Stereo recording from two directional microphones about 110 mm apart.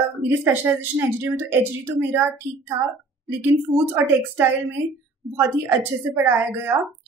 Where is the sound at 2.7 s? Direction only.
50° right (ahead or behind).